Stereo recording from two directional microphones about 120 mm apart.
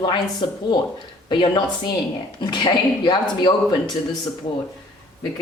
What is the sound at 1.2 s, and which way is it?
Speech, 40° left (ahead or behind).